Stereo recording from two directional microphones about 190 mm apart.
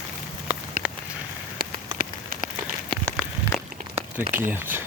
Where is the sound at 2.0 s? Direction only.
50° right (ahead or behind).